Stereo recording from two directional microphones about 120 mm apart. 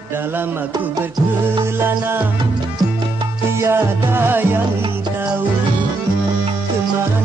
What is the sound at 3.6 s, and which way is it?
Music, 20° right (ahead or behind).